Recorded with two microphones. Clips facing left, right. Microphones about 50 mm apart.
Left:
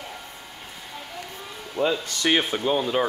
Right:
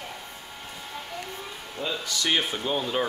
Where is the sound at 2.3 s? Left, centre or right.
Centre.